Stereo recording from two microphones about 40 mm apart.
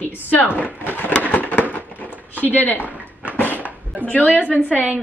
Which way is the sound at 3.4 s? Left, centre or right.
Right.